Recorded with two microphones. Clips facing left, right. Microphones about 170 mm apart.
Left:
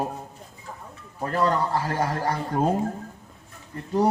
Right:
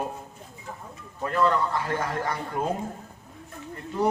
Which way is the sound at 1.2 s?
35° left (ahead or behind).